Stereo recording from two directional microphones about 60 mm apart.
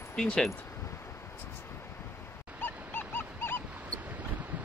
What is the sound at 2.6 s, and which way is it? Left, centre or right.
Dog, left.